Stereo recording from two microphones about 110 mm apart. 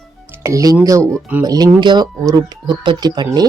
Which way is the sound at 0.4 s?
30° right (ahead or behind).